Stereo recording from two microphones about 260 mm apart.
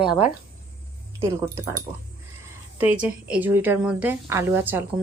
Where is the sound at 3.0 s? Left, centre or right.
Centre.